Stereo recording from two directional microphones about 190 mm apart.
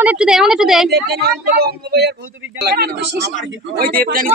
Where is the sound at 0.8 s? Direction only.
60° right (ahead or behind).